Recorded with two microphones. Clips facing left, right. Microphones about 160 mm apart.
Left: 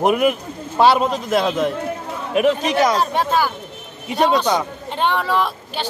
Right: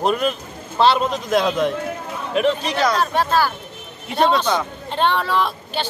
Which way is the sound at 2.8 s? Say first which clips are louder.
Right 1 dB; 20° left (ahead or behind).